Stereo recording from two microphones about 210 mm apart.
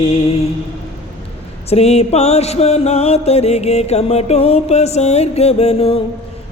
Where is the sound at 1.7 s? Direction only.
30° left (ahead or behind).